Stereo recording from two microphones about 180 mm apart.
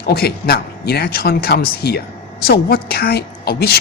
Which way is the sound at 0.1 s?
60° left (ahead or behind).